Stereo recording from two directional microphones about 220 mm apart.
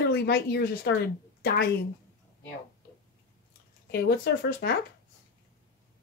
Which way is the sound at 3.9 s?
45° left (ahead or behind).